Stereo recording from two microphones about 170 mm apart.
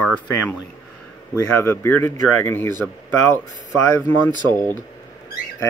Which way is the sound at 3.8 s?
20° left (ahead or behind).